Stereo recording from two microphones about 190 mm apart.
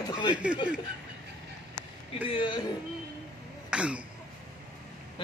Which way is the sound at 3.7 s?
5° right (ahead or behind).